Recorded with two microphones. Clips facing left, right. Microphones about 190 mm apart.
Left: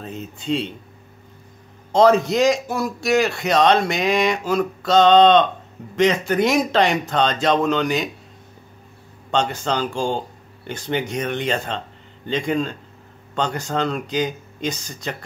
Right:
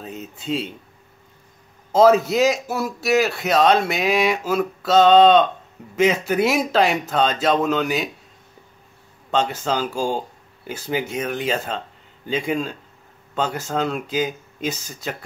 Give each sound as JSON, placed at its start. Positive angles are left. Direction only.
{"t": 0.0, "sound": "a man's voice", "side_deg": -5}
{"t": 1.9, "sound": "a man's voice", "side_deg": -5}
{"t": 9.3, "sound": "a man's voice", "side_deg": 0}